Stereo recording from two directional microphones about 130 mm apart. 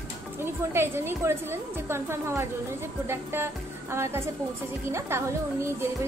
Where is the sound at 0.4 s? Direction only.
20° right (ahead or behind).